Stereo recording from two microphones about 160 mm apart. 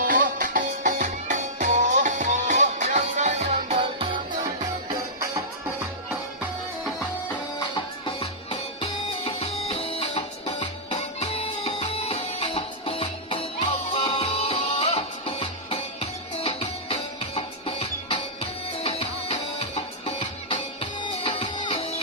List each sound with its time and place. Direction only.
0.0 s music: 55° right (ahead or behind)
8.0 s music: 35° left (ahead or behind)
10.9 s music: 40° left (ahead or behind)